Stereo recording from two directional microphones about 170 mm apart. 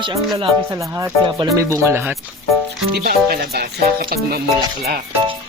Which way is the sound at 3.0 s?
65° right (ahead or behind).